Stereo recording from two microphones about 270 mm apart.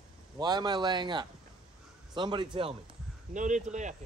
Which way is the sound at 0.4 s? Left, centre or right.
Centre.